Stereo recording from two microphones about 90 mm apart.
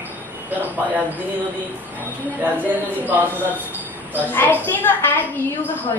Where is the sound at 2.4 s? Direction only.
20° right (ahead or behind).